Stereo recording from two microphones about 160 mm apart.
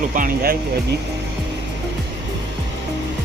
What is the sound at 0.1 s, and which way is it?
Speech, 55° right (ahead or behind).